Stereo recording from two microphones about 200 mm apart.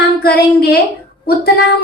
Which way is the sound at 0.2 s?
50° left (ahead or behind).